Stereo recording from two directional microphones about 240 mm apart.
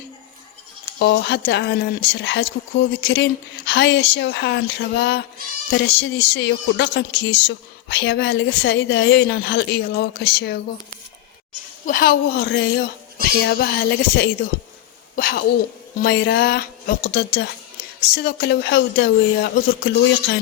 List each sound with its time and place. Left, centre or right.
0.9 s speech: left
11.9 s a woman's voice: left